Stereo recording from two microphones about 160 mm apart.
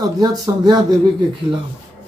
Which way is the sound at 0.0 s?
25° right (ahead or behind).